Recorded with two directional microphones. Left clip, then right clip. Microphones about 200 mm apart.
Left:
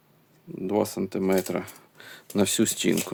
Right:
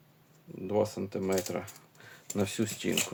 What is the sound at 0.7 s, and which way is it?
Speech, 65° left (ahead or behind).